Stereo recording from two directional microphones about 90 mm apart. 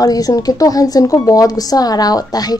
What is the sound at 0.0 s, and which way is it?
Speech, 45° left (ahead or behind).